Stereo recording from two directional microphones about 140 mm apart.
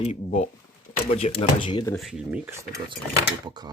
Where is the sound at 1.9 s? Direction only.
Centre (ahead or behind).